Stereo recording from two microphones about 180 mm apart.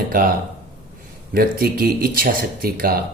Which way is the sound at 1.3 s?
55° right (ahead or behind).